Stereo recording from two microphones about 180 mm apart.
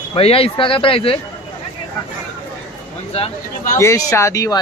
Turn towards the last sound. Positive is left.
turn(degrees=20)  # may be behind; listen again after turning